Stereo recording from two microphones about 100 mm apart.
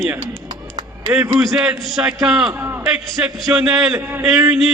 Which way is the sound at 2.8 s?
5° right (ahead or behind).